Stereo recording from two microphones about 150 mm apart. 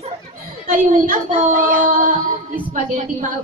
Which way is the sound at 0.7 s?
60° right (ahead or behind).